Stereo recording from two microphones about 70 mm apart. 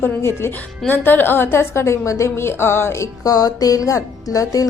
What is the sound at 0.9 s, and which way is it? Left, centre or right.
A woman's voice, left.